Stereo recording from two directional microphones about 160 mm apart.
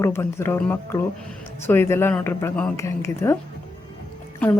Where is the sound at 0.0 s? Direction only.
15° left (ahead or behind).